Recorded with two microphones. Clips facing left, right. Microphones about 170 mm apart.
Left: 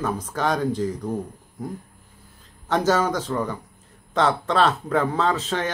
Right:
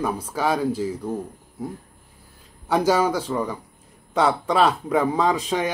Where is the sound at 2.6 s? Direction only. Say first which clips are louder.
Right 1 dB; 10° right (ahead or behind).